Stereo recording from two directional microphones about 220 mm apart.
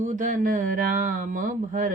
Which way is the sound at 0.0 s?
35° right (ahead or behind).